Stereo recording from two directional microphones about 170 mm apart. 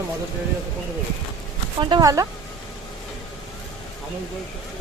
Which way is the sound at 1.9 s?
20° right (ahead or behind).